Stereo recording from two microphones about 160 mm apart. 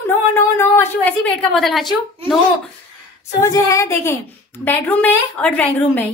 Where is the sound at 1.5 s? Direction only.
Centre (ahead or behind).